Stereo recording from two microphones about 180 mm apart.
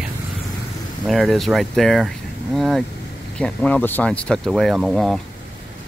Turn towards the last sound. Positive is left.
turn(degrees=0)  # may be behind; listen again after turning